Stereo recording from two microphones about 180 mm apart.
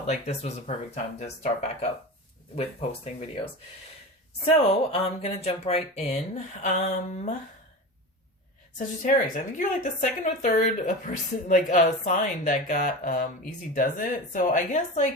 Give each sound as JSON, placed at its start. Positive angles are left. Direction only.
{"t": 0.1, "sound": "speech", "side_deg": 40}
{"t": 9.0, "sound": "speech", "side_deg": 45}